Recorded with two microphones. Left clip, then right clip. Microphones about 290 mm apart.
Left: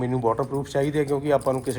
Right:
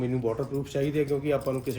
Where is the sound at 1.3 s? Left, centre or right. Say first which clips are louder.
Left 6 dB; centre.